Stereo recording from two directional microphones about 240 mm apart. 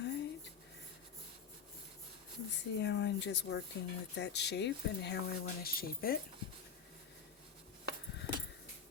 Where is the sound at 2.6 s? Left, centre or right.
Left.